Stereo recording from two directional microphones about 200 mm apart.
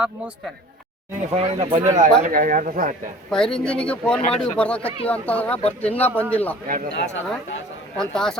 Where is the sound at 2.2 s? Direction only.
40° right (ahead or behind).